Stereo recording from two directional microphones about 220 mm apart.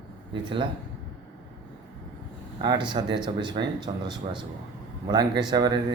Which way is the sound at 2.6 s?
20° right (ahead or behind).